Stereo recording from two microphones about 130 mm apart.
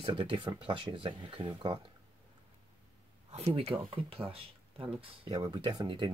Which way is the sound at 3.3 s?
55° right (ahead or behind).